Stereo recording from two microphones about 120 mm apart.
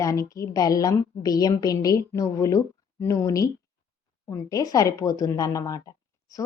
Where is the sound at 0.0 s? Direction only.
25° left (ahead or behind).